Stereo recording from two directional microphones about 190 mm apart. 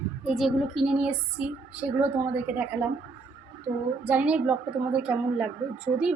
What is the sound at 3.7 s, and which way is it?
Speech, 30° right (ahead or behind).